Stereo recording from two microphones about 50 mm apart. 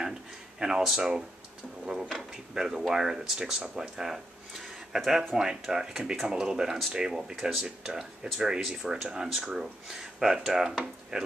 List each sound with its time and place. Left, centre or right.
0.6 s speech: centre